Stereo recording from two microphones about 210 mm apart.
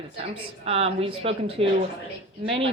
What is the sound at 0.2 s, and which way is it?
A woman's voice, 30° right (ahead or behind).